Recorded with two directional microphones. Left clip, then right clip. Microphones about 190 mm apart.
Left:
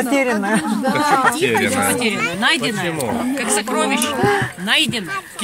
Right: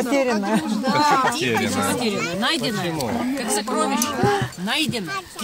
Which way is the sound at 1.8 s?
25° right (ahead or behind).